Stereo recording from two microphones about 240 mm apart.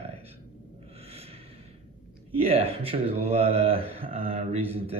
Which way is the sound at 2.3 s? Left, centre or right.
Right.